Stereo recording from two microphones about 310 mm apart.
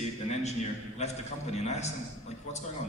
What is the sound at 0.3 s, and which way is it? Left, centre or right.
A man's voice, left.